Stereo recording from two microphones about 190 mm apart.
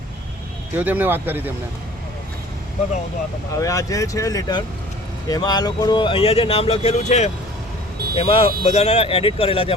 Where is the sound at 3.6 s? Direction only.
15° left (ahead or behind).